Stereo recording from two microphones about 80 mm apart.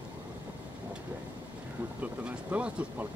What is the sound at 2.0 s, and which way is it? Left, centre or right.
Boat, centre.